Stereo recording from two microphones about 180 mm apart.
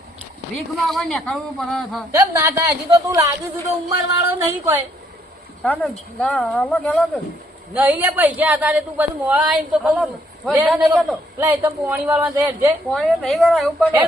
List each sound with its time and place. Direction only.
0.5 s speech: centre (ahead or behind)
2.1 s a man's voice: 15° right (ahead or behind)
5.6 s speech: 5° left (ahead or behind)
7.7 s a man's voice: 10° right (ahead or behind)
12.9 s speech: centre (ahead or behind)